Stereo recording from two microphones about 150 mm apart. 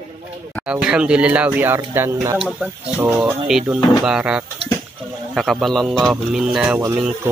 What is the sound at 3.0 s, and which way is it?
Speech, 15° right (ahead or behind).